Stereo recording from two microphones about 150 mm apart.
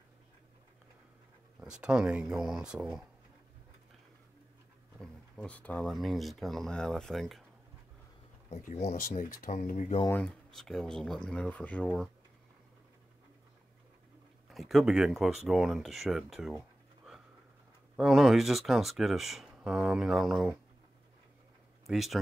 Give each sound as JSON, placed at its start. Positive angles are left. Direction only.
{"t": 1.6, "sound": "speech", "side_deg": -5}
{"t": 4.9, "sound": "speech", "side_deg": 5}
{"t": 8.5, "sound": "speech", "side_deg": 50}
{"t": 9.1, "sound": "speech", "side_deg": 65}
{"t": 10.2, "sound": "speech", "side_deg": 5}
{"t": 14.5, "sound": "speech", "side_deg": 0}
{"t": 21.8, "sound": "speech", "side_deg": 0}